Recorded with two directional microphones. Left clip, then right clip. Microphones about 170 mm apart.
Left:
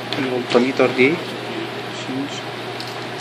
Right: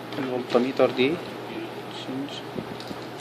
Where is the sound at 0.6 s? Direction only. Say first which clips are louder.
Left 6 dB; 5° right (ahead or behind).